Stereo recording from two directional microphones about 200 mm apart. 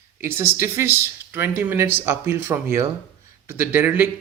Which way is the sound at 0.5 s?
15° right (ahead or behind).